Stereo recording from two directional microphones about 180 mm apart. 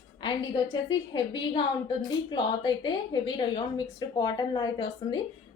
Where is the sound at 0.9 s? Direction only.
25° left (ahead or behind).